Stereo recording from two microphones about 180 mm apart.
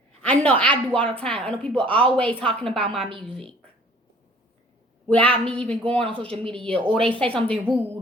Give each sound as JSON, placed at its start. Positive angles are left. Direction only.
{"t": 0.2, "sound": "a woman's voice", "side_deg": 10}
{"t": 5.0, "sound": "a woman's voice", "side_deg": 10}
{"t": 6.7, "sound": "a woman's voice", "side_deg": -30}
{"t": 7.0, "sound": "a woman's voice", "side_deg": 5}